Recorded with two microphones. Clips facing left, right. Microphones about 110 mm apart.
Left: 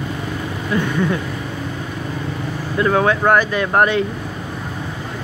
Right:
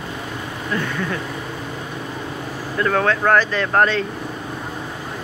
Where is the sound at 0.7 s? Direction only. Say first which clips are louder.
Left 4 dB; 10° left (ahead or behind).